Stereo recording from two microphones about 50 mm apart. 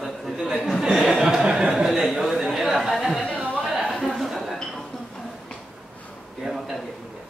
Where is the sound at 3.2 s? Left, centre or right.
Left.